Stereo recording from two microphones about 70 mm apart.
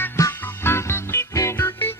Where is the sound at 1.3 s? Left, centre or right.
Left.